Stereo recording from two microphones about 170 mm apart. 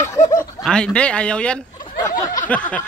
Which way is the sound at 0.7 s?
5° left (ahead or behind).